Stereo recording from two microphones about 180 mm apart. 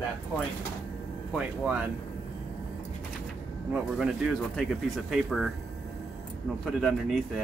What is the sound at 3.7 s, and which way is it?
Speech, centre (ahead or behind).